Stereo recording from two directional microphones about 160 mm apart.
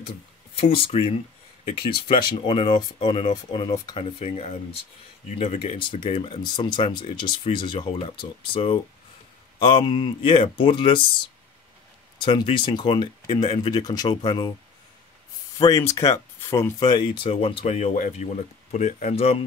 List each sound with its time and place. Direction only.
0.6 s speech: 35° left (ahead or behind)
15.7 s speech: 20° left (ahead or behind)
16.8 s speech: 30° left (ahead or behind)